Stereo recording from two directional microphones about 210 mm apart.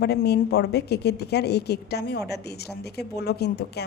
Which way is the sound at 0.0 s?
50° left (ahead or behind).